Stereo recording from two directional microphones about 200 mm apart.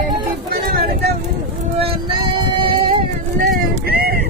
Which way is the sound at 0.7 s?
50° right (ahead or behind).